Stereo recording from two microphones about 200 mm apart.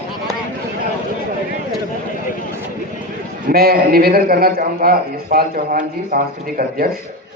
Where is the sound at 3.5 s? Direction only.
50° right (ahead or behind).